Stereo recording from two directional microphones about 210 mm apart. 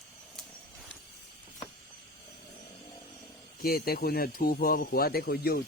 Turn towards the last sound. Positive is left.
turn(degrees=45)  # may be behind; listen again after turning